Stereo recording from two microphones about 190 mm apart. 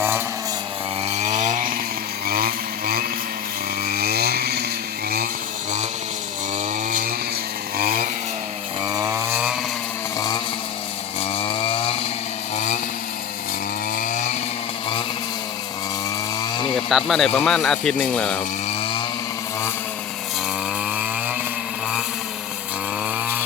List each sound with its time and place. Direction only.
1.0 s chainsaw: 35° right (ahead or behind)
2.2 s vehicle: 50° right (ahead or behind)
3.8 s chainsaw: 55° right (ahead or behind)
7.8 s chainsaw: 50° right (ahead or behind)
8.9 s chainsaw: 15° right (ahead or behind)
10.2 s vehicle: 20° left (ahead or behind)
11.3 s chainsaw: 30° left (ahead or behind)
12.5 s vehicle: 40° left (ahead or behind)
13.9 s chainsaw: 45° left (ahead or behind)
16.4 s chainsaw: 25° left (ahead or behind)
16.7 s speech: centre (ahead or behind)
20.9 s chainsaw: 5° right (ahead or behind)